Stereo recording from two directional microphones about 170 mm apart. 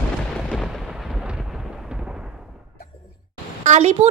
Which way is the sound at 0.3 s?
Centre (ahead or behind).